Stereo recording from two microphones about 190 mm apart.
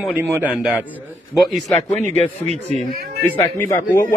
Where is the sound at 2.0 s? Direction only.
35° right (ahead or behind).